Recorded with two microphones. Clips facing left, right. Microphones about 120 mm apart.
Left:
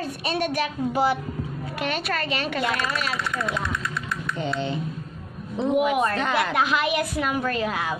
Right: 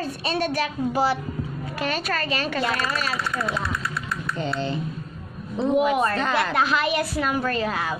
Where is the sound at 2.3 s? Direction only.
15° left (ahead or behind).